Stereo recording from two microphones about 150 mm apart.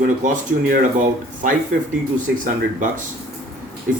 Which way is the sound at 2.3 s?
60° right (ahead or behind).